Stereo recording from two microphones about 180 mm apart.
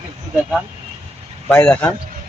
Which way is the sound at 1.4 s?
5° left (ahead or behind).